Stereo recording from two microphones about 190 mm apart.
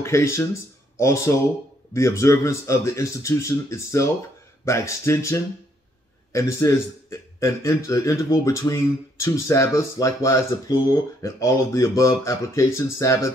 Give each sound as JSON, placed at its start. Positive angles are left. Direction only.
{"t": 0.0, "sound": "a man's voice", "side_deg": 15}